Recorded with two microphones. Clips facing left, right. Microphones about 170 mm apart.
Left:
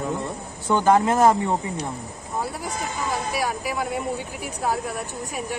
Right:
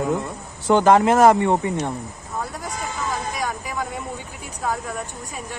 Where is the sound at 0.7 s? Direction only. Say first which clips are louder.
Right 3 dB; 90° right.